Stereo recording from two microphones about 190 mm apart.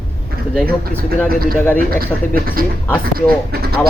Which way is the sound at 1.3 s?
50° right (ahead or behind).